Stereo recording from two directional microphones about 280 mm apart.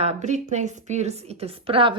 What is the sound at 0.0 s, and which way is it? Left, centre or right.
A woman's voice, right.